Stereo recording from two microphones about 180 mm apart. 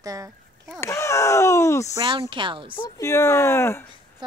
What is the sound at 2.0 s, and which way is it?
Speech, 30° right (ahead or behind).